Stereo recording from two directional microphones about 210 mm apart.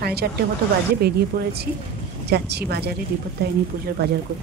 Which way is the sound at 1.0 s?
50° right (ahead or behind).